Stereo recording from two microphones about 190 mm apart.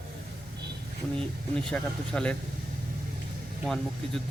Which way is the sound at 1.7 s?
5° left (ahead or behind).